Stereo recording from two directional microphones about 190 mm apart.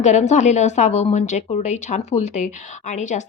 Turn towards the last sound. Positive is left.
turn(degrees=40)  # may be behind; listen again after turning